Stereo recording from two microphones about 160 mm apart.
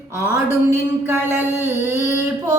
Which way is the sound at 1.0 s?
15° right (ahead or behind).